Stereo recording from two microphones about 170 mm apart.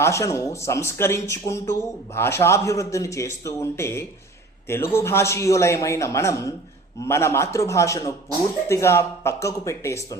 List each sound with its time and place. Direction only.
0.0 s a man's voice: 15° left (ahead or behind)